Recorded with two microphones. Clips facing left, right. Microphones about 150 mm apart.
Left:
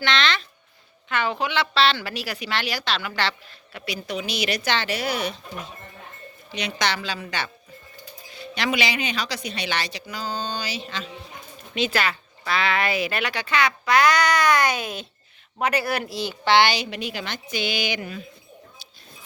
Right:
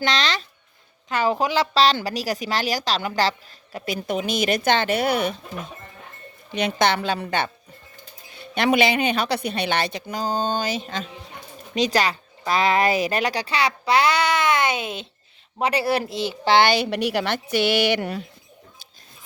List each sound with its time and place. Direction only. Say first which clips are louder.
0.0 s a woman's voice: even; 35° right (ahead or behind); by 5.4 s 50° right (ahead or behind)
6.5 s a woman's voice: right 6 dB; 50° right (ahead or behind)
8.5 s a woman's voice: right 6 dB; 50° right (ahead or behind); by 16.3 s 25° right (ahead or behind)
16.4 s speech: right 2 dB; 40° right (ahead or behind); by 18.3 s 70° right (ahead or behind)